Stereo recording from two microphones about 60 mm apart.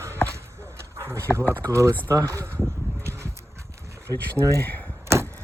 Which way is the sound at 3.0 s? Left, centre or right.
Right.